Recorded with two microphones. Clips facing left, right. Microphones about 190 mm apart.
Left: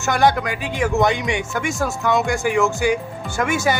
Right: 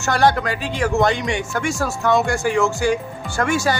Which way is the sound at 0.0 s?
15° left (ahead or behind).